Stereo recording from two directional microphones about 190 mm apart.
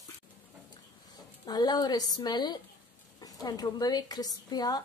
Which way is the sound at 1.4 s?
20° left (ahead or behind).